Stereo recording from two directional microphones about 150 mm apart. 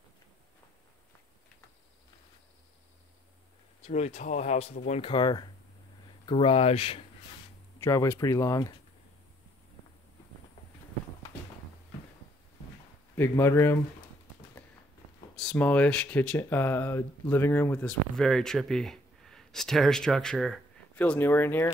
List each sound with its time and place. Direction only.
3.8 s speech: 50° left (ahead or behind)
5.1 s speech: 30° left (ahead or behind)
7.8 s speech: 20° left (ahead or behind)
13.1 s speech: 15° left (ahead or behind)
15.3 s speech: 5° left (ahead or behind)